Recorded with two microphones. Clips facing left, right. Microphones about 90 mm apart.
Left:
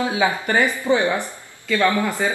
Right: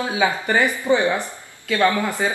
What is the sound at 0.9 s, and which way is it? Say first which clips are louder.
Speech: even; 10° right (ahead or behind).